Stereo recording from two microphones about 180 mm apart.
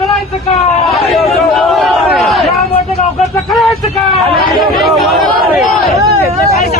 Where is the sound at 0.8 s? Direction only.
Centre (ahead or behind).